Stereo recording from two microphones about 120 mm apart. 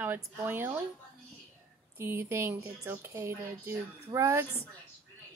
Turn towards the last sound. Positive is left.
turn(degrees=-25)  # may be behind; listen again after turning